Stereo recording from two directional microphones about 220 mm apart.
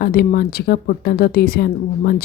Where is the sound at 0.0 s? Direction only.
45° left (ahead or behind).